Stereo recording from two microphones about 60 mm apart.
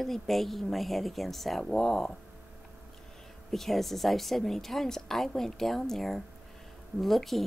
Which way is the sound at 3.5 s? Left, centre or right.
Centre.